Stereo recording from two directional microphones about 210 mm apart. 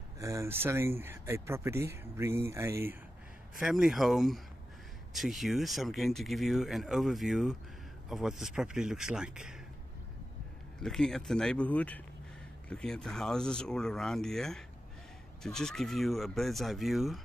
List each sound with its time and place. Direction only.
0.2 s speech: 15° right (ahead or behind)
10.8 s speech: centre (ahead or behind)